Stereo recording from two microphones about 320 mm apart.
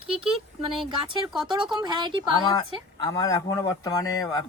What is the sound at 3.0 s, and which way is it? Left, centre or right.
Speech, centre.